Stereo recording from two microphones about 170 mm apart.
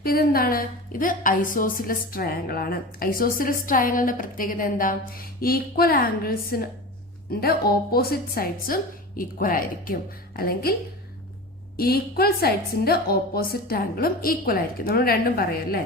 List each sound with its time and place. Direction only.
0.0 s a woman's voice: 60° left (ahead or behind)
11.8 s a woman's voice: 60° left (ahead or behind)